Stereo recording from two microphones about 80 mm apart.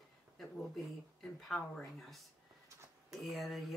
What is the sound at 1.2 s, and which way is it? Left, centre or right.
Speech, centre.